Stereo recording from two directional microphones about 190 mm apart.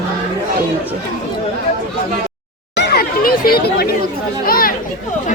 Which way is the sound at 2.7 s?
65° left (ahead or behind).